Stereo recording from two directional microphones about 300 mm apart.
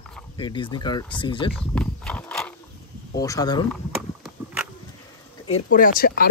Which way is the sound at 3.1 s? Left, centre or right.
Centre.